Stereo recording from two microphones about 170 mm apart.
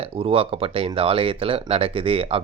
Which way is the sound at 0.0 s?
35° right (ahead or behind).